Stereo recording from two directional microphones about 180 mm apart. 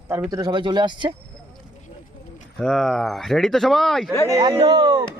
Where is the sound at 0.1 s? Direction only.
15° right (ahead or behind).